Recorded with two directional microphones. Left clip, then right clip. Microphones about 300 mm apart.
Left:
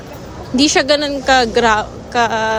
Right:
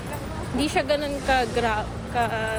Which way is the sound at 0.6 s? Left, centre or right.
Left.